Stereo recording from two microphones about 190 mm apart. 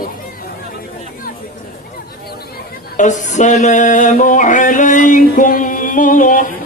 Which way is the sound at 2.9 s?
40° left (ahead or behind).